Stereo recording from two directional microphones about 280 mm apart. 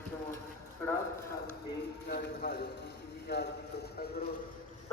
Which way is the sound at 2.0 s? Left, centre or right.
Left.